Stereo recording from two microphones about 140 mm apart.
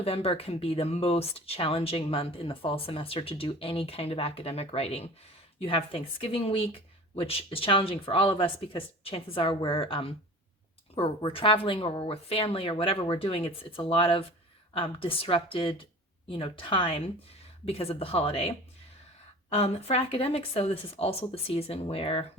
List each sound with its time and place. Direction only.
0.0 s a woman's voice: 45° left (ahead or behind)